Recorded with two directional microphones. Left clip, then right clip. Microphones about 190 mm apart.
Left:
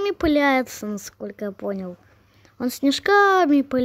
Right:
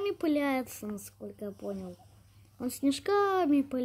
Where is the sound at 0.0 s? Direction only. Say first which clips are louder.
Left 10 dB; 25° left (ahead or behind).